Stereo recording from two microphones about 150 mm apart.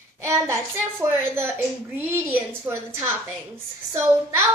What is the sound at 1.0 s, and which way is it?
A woman's voice, 15° right (ahead or behind).